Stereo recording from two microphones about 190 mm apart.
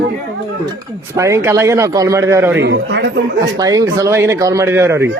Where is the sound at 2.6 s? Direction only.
65° right (ahead or behind).